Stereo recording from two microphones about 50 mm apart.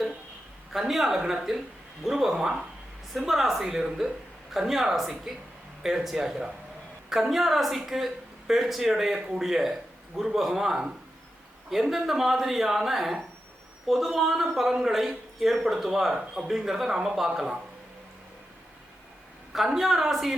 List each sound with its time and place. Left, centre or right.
0.7 s speech: centre
19.5 s speech: centre